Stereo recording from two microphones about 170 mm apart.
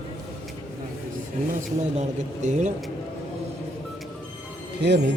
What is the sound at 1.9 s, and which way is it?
Speech, 45° right (ahead or behind).